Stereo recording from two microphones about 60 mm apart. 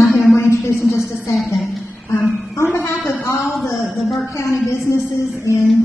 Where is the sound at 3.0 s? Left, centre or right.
Left.